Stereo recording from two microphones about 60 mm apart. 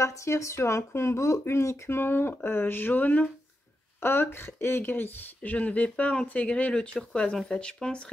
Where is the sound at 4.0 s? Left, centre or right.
Left.